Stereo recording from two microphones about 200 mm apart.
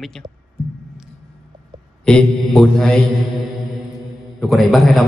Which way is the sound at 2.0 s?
5° left (ahead or behind).